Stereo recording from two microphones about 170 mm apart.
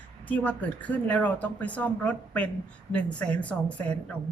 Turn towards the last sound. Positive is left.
turn(degrees=10)  # may be behind; listen again after turning